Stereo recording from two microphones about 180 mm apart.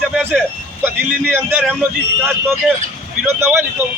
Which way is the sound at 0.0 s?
5° right (ahead or behind).